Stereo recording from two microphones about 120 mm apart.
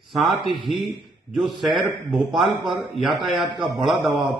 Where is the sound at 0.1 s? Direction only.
Centre (ahead or behind).